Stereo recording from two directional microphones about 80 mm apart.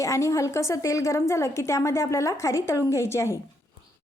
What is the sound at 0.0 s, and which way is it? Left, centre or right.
A woman's voice, left.